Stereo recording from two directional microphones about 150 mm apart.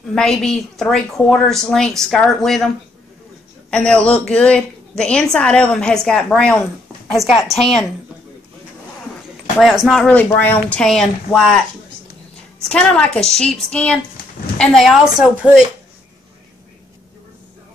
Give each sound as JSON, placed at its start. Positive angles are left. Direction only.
{"t": 0.1, "sound": "a woman's voice", "side_deg": 5}
{"t": 3.7, "sound": "a woman's voice", "side_deg": 5}
{"t": 9.6, "sound": "a woman's voice", "side_deg": 0}
{"t": 12.6, "sound": "a woman's voice", "side_deg": 5}